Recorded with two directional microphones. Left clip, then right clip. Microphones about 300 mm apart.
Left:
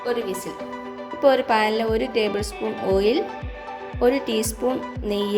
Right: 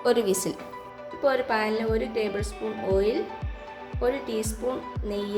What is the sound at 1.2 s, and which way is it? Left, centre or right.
Speech, left.